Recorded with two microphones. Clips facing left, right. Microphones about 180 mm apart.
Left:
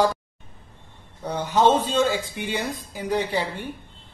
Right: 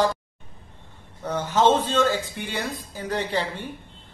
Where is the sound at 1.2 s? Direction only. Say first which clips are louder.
Left 1 dB; 15° left (ahead or behind).